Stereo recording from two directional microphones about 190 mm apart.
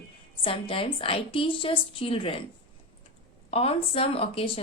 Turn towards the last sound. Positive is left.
turn(degrees=30)  # may be behind; listen again after turning